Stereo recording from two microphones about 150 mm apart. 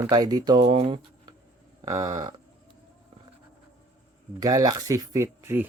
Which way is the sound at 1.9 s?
20° right (ahead or behind).